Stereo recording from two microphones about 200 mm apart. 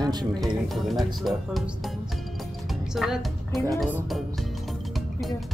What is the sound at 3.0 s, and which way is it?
A woman's voice, centre (ahead or behind).